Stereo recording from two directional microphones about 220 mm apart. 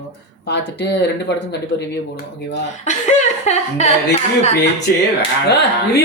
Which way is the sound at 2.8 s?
30° left (ahead or behind).